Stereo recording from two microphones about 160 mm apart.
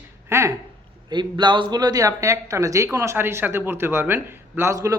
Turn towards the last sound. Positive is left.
turn(degrees=-20)  # may be behind; listen again after turning